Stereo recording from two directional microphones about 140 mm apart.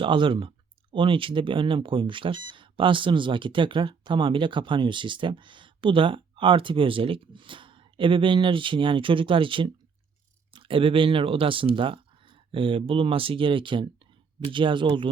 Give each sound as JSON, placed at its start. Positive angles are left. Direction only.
{"t": 0.0, "sound": "speech", "side_deg": -35}